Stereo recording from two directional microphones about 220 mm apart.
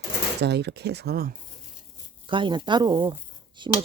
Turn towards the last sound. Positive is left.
turn(degrees=-20)  # may be behind; listen again after turning